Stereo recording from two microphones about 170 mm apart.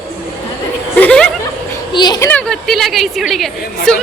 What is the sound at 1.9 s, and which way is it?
Speech, 25° left (ahead or behind).